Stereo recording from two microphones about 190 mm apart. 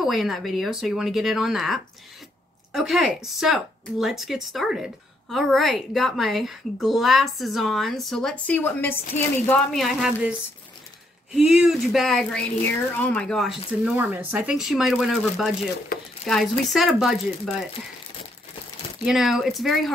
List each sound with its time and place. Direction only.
0.0 s speech: centre (ahead or behind)
11.3 s speech: 5° right (ahead or behind)
15.9 s speech: 50° left (ahead or behind)
16.3 s speech: centre (ahead or behind)
19.0 s speech: centre (ahead or behind)